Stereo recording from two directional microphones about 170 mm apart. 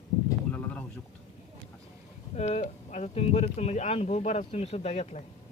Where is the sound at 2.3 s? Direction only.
40° left (ahead or behind).